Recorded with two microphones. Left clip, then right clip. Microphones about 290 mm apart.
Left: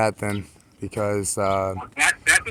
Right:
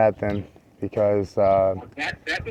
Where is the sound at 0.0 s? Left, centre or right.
Centre.